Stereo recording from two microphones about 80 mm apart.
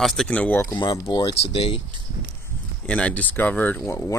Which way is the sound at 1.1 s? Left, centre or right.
Left.